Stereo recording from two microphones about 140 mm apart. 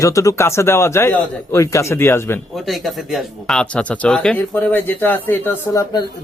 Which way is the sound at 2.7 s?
Centre (ahead or behind).